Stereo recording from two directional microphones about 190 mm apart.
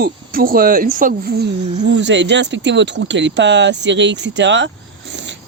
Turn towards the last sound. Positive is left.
turn(degrees=-70)  # may be behind; listen again after turning